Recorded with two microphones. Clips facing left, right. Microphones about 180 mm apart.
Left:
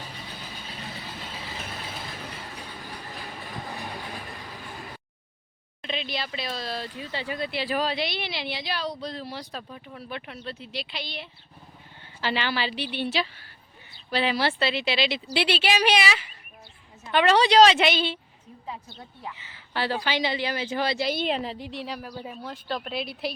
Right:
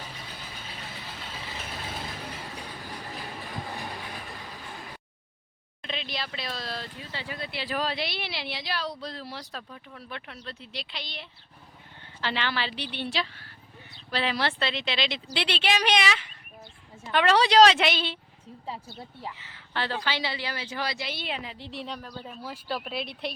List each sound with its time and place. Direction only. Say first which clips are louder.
5.8 s speech: left 3 dB; centre (ahead or behind)
7.1 s speech: left 6 dB; 15° left (ahead or behind)
7.8 s speech: even; centre (ahead or behind)
19.3 s speech: left 1 dB; centre (ahead or behind); by 21.0 s 25° left (ahead or behind)
21.0 s a woman's voice: left 8 dB; 40° left (ahead or behind)
21.7 s speech: left 2 dB; centre (ahead or behind)
22.4 s speech: even; 5° right (ahead or behind)